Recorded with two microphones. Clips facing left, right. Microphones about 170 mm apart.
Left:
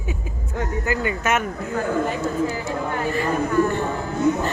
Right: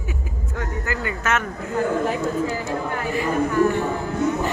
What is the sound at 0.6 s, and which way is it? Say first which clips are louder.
Speech: left 4 dB; 20° left (ahead or behind).